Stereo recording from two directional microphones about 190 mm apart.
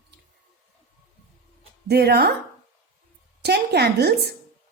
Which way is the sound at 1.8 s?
60° right (ahead or behind).